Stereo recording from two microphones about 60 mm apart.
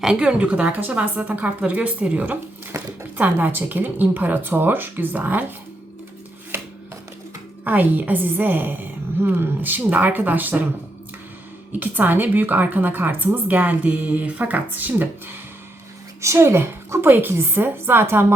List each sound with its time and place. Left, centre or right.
0.0 s a woman's voice: centre
2.7 s a sound: right
3.2 s a woman's voice: right
7.6 s a woman's voice: right
11.7 s a woman's voice: right
16.2 s a woman's voice: right